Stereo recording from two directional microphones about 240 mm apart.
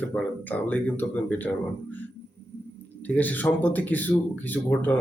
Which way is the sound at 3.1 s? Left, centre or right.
Centre.